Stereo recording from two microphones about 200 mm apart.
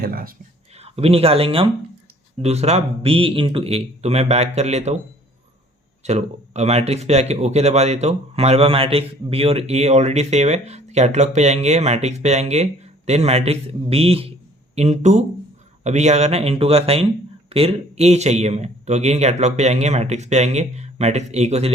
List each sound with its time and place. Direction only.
0.0 s speech: 45° right (ahead or behind)
0.8 s speech: 30° right (ahead or behind)
6.0 s speech: 35° right (ahead or behind)